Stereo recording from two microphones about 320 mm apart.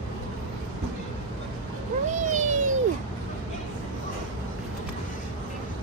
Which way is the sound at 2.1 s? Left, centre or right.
Right.